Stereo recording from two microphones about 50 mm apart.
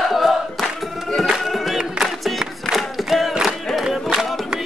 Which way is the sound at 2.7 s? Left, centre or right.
Centre.